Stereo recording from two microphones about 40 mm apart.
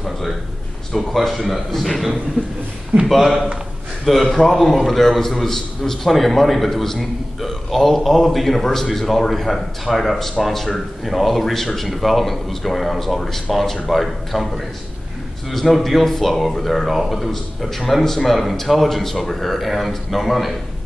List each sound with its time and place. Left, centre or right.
0.9 s speech: centre